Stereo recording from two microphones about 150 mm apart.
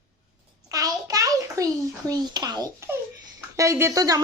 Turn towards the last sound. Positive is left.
turn(degrees=-25)  # may be behind; listen again after turning